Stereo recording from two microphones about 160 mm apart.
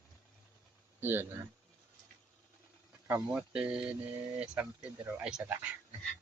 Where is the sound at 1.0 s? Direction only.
15° right (ahead or behind).